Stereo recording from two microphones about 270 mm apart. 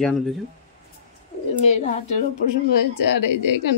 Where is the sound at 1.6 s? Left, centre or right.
Left.